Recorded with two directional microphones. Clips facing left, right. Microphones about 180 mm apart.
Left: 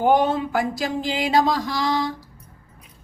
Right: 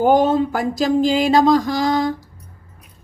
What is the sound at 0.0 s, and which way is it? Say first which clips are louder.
Speech: right 4 dB; 45° right (ahead or behind).